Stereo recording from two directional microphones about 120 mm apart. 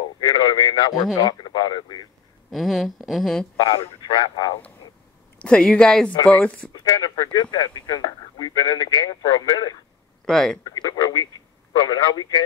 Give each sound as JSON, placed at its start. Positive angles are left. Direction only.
{"t": 0.2, "sound": "a man's voice", "side_deg": 40}
{"t": 2.5, "sound": "speech", "side_deg": 0}
{"t": 3.5, "sound": "speech", "side_deg": 50}
{"t": 5.4, "sound": "speech", "side_deg": 10}
{"t": 6.7, "sound": "speech", "side_deg": 35}
{"t": 10.2, "sound": "speech", "side_deg": 5}
{"t": 10.6, "sound": "speech", "side_deg": 35}